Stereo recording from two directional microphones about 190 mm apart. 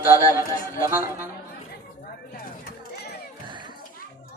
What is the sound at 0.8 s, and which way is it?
Speech, 10° right (ahead or behind).